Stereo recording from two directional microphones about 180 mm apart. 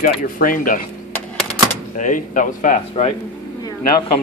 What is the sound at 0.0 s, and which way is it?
Speech, 50° left (ahead or behind).